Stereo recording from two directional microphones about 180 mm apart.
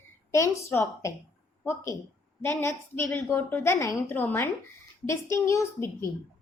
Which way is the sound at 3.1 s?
10° left (ahead or behind).